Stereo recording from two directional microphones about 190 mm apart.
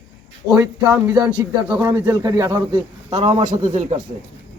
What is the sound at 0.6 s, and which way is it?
Speech, 15° right (ahead or behind).